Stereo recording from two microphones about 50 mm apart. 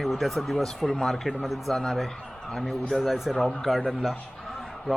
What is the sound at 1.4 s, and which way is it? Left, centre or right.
Speech, centre.